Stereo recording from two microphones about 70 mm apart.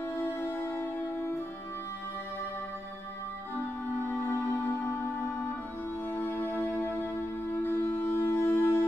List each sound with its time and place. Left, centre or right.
0.2 s music: left
4.0 s music: left
6.1 s music: left